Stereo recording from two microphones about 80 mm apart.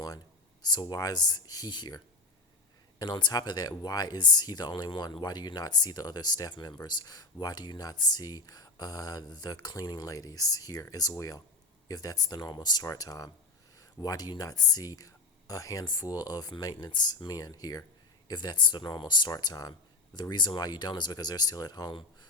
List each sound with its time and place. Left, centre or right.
0.6 s speech: left
3.0 s speech: left
15.8 s speech: left
18.3 s speech: left
20.3 s speech: left